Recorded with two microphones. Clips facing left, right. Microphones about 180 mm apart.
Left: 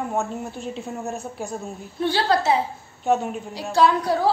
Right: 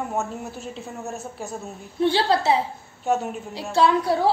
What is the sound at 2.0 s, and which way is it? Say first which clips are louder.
Speech: right 1 dB; 25° right (ahead or behind).